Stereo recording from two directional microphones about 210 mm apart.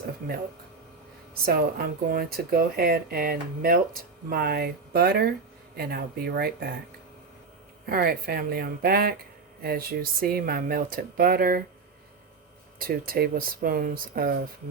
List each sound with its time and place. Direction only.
1.3 s speech: 45° right (ahead or behind)
7.9 s speech: 45° right (ahead or behind)
12.8 s speech: 45° right (ahead or behind)